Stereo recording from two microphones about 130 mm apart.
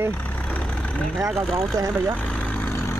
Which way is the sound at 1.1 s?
Centre (ahead or behind).